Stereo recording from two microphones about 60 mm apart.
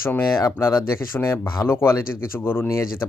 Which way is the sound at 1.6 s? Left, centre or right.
Left.